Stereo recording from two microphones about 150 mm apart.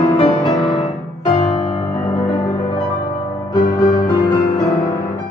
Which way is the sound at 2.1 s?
40° left (ahead or behind).